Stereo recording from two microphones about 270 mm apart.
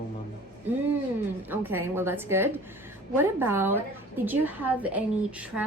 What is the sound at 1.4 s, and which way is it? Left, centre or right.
A woman's voice, centre.